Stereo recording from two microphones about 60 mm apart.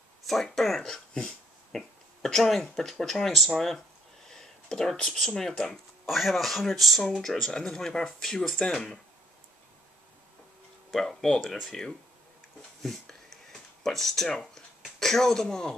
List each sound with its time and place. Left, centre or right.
0.3 s speech: centre
0.9 s dog: centre
2.2 s speech: centre
7.5 s speech: centre
10.9 s speech: centre
12.8 s a sound: centre
15.0 s speech: centre